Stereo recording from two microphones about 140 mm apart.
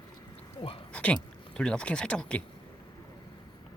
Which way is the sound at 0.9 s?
10° left (ahead or behind).